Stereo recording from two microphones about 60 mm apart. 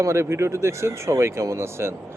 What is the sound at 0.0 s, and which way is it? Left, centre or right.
Speech, right.